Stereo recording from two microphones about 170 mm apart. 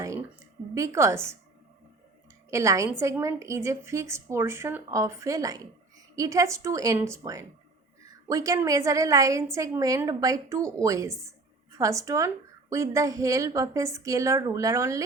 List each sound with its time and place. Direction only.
0.0 s a sound: 15° right (ahead or behind)
0.7 s a woman's voice: 20° right (ahead or behind)
2.5 s a woman's voice: 15° right (ahead or behind)